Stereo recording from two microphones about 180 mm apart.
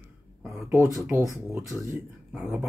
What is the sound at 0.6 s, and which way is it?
Speech, 15° right (ahead or behind).